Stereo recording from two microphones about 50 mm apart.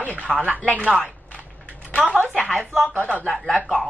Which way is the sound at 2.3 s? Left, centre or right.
Centre.